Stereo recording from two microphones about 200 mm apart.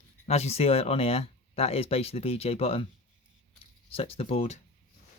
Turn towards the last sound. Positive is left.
turn(degrees=30)  # may be behind; listen again after turning